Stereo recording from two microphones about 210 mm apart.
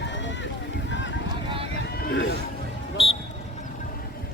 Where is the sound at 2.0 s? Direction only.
50° left (ahead or behind).